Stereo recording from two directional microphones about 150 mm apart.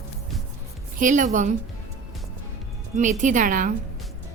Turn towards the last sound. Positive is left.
turn(degrees=-65)  # may be behind; listen again after turning